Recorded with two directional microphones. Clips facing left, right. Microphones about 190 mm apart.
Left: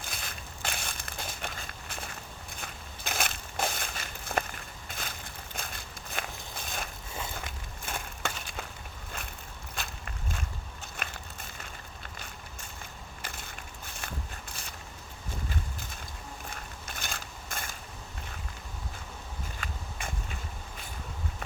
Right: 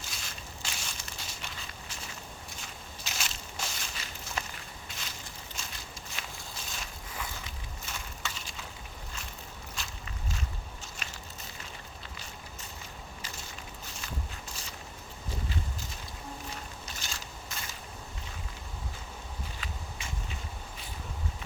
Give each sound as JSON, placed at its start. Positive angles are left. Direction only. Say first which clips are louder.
{"t": 0.0, "sound": "crushing", "louder": "left 3 dB", "side_deg": 55}
{"t": 6.6, "sound": "boat", "louder": "left 6 dB", "side_deg": 55}
{"t": 7.3, "sound": "crushing", "louder": "left 3 dB", "side_deg": 55}
{"t": 9.1, "sound": "boat", "louder": "left 5 dB", "side_deg": 55}
{"t": 9.7, "sound": "walk", "louder": "left 5 dB", "side_deg": 55}
{"t": 10.9, "sound": "crushing", "louder": "left 3 dB", "side_deg": 55}
{"t": 12.0, "sound": "vehicle", "louder": "even", "side_deg": 55}
{"t": 13.2, "sound": "a sound", "louder": "left 4 dB", "side_deg": 55}
{"t": 16.5, "sound": "a sound", "louder": "right 1 dB", "side_deg": 55}
{"t": 19.5, "sound": "walk", "louder": "left 2 dB", "side_deg": 50}